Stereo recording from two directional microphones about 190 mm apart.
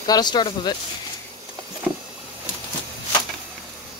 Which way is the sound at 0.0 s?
20° left (ahead or behind).